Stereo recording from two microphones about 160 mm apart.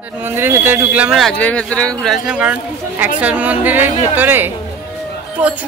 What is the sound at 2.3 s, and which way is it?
A woman's voice, 10° right (ahead or behind).